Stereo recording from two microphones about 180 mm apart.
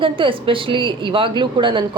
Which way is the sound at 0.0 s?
30° right (ahead or behind).